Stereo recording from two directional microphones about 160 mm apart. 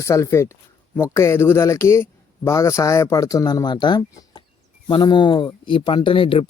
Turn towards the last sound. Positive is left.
turn(degrees=35)  # may be behind; listen again after turning